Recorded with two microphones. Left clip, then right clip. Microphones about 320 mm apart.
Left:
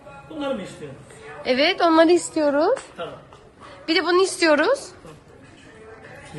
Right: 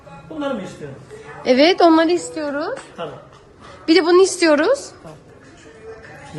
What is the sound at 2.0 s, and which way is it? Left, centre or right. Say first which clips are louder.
Speech: left 1 dB; centre.